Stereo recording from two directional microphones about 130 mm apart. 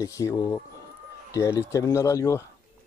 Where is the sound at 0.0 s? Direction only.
25° left (ahead or behind).